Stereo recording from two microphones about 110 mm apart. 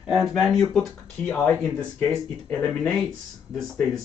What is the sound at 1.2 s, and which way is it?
Speech, 15° left (ahead or behind).